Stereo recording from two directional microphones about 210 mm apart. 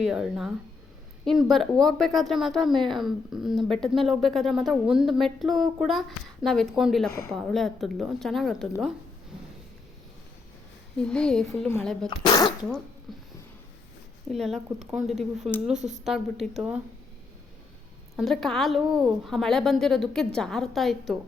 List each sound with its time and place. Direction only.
0.0 s a woman's voice: 5° right (ahead or behind)
10.9 s a woman's voice: 5° left (ahead or behind)
12.2 s speech: 20° left (ahead or behind)
13.1 s a sound: centre (ahead or behind)
14.3 s a woman's voice: centre (ahead or behind)
18.2 s a woman's voice: centre (ahead or behind)